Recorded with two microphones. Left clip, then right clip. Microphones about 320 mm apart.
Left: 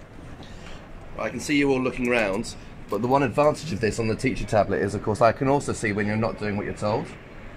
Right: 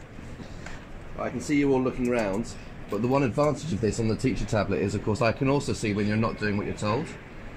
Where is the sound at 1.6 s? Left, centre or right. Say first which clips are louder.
Left 1 dB; left.